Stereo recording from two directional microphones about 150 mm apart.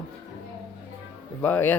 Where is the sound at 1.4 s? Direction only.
10° left (ahead or behind).